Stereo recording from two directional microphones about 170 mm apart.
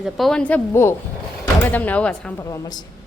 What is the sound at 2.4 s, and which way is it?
Speech, 20° left (ahead or behind).